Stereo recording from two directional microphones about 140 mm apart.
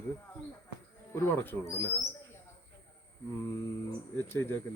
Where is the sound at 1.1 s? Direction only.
15° left (ahead or behind).